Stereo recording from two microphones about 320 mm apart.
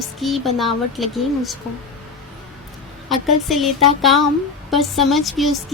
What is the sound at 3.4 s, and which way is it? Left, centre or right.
Speech, centre.